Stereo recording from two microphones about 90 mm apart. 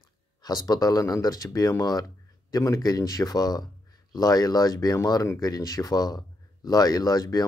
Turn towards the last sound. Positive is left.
turn(degrees=45)  # may be behind; listen again after turning